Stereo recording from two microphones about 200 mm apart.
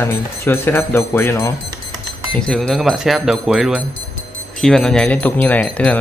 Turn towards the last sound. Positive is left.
turn(degrees=5)  # may be behind; listen again after turning